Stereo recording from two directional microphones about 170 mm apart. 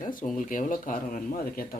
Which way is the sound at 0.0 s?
50° left (ahead or behind).